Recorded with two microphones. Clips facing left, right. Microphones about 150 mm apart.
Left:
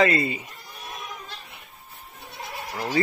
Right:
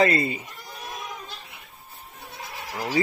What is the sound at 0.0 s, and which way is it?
Speech, 40° right (ahead or behind).